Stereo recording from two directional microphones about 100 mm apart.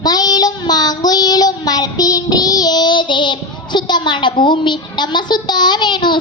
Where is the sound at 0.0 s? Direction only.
40° left (ahead or behind).